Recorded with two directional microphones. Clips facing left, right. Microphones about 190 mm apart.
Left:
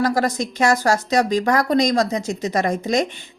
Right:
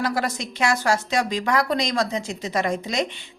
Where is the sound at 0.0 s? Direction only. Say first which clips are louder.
Left 5 dB; 40° left (ahead or behind).